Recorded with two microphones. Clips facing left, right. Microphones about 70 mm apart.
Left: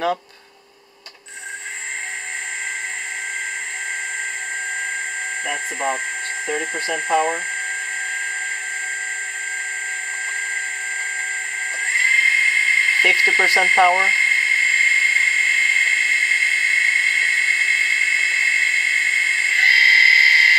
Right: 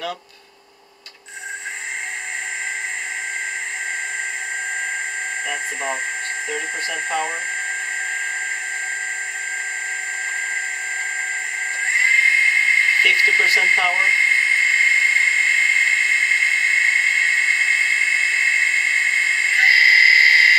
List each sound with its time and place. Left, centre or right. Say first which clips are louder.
5.5 s speech: left 4 dB; centre
12.0 s dental drill: right 1 dB; centre
13.2 s speech: even; centre
13.6 s dental drill: left 3 dB; centre